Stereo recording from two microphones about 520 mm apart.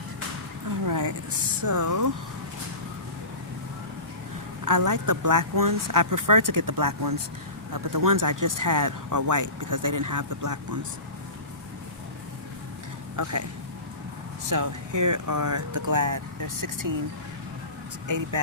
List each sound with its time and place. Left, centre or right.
0.9 s a sound: right
1.6 s speech: right
4.6 s speech: right
13.1 s speech: right
14.5 s speech: right